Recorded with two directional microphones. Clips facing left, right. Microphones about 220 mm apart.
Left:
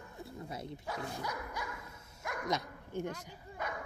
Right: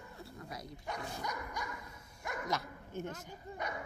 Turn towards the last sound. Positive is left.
turn(degrees=15)  # may be behind; listen again after turning